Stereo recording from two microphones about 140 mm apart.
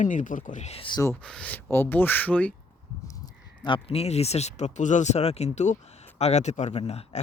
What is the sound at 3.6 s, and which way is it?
Speech, 40° left (ahead or behind).